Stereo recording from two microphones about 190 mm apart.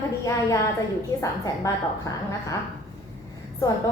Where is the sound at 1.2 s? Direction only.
15° left (ahead or behind).